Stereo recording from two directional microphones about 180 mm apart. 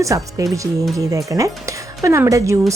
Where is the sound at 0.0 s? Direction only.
20° right (ahead or behind).